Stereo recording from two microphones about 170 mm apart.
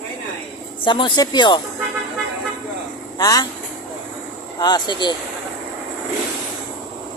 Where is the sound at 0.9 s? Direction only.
30° left (ahead or behind).